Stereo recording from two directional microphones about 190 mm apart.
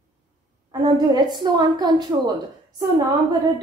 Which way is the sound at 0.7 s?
20° right (ahead or behind).